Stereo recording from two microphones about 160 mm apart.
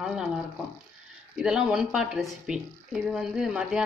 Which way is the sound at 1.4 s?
5° right (ahead or behind).